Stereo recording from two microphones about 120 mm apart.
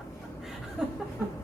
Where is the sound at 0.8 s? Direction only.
5° right (ahead or behind).